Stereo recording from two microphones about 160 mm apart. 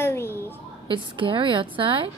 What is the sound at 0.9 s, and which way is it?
A woman's voice, 30° right (ahead or behind).